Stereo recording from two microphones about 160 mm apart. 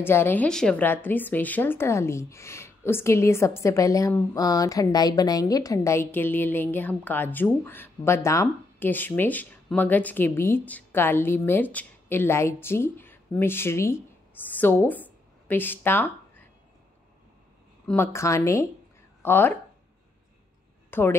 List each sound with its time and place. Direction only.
0.0 s a woman's voice: 15° left (ahead or behind)
17.8 s a woman's voice: 15° left (ahead or behind)
20.9 s speech: 15° left (ahead or behind)